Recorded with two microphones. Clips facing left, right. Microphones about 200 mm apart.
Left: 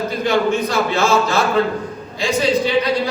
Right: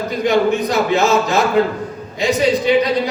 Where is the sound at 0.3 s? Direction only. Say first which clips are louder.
Right 3 dB; 15° right (ahead or behind).